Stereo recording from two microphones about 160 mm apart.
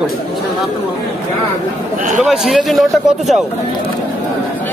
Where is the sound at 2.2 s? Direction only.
Centre (ahead or behind).